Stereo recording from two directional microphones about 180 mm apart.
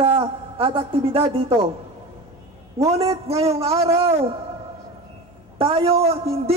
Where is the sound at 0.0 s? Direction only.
30° right (ahead or behind).